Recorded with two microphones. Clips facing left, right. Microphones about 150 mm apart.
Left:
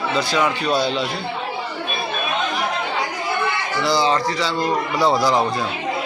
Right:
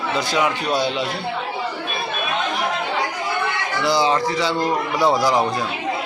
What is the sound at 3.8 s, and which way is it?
Speech, 15° right (ahead or behind).